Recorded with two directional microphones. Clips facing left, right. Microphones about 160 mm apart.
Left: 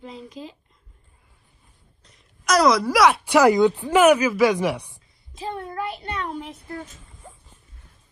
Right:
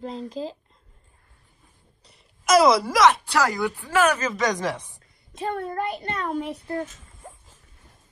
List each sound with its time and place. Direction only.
0.0 s speech: 40° right (ahead or behind)
2.1 s a woman's voice: centre (ahead or behind)
3.3 s speech: 15° left (ahead or behind)
5.5 s child singing: 50° right (ahead or behind)